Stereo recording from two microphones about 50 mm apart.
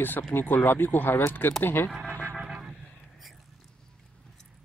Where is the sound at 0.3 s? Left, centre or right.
Left.